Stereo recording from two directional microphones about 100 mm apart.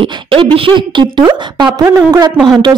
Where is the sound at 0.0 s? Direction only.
60° right (ahead or behind).